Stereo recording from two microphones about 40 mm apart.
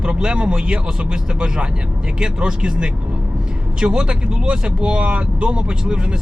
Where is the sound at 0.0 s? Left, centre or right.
Right.